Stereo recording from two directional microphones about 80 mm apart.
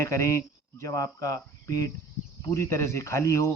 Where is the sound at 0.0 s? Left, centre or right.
Left.